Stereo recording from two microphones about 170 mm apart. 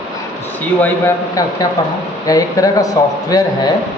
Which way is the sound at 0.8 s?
15° left (ahead or behind).